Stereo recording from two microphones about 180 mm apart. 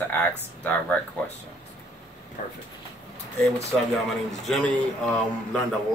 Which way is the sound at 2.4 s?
50° left (ahead or behind).